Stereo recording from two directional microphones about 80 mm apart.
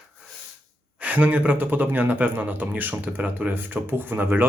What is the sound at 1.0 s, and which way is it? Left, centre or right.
Speech, centre.